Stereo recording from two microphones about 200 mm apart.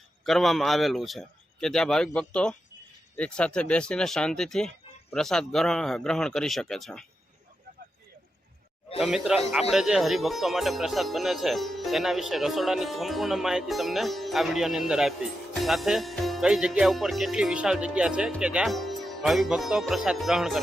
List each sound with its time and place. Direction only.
0.3 s speech: centre (ahead or behind)
9.0 s speech: centre (ahead or behind)